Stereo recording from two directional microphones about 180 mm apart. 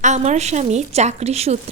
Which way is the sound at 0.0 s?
40° right (ahead or behind).